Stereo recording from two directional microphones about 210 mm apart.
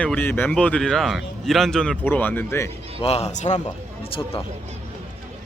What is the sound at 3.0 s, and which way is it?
Speech, 30° left (ahead or behind).